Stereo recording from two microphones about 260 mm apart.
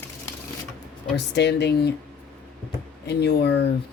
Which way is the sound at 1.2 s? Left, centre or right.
Left.